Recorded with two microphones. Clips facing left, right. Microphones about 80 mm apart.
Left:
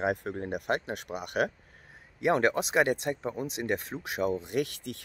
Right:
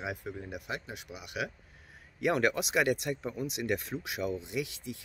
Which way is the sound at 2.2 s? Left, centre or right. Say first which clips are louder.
Left 3 dB; left.